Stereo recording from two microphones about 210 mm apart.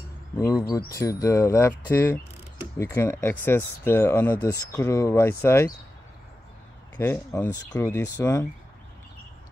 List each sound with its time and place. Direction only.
0.4 s speech: 15° left (ahead or behind)
7.0 s speech: 10° left (ahead or behind)